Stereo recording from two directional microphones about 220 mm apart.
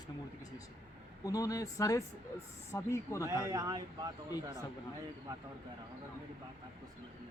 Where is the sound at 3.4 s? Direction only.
15° right (ahead or behind).